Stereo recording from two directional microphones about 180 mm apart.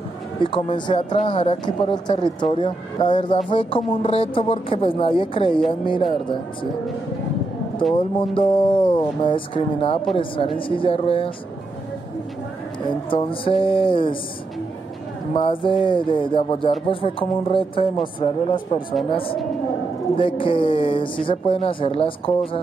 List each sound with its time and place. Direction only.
0.4 s speech: 30° left (ahead or behind)
7.9 s a woman's voice: 30° left (ahead or behind)
12.8 s speech: 30° left (ahead or behind)
15.3 s a woman's voice: 30° left (ahead or behind)